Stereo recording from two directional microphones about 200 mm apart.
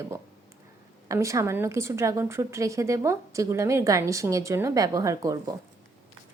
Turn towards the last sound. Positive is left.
turn(degrees=-15)  # may be behind; listen again after turning